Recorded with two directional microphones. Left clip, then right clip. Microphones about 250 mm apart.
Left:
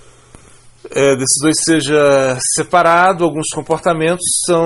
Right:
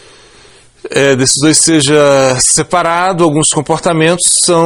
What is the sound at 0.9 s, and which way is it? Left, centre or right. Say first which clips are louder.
Speech: right 3 dB; right.